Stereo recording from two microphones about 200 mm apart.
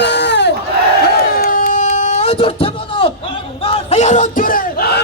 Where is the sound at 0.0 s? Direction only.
60° left (ahead or behind).